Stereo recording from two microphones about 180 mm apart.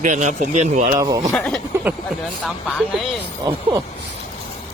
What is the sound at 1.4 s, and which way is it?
Speech, 5° left (ahead or behind).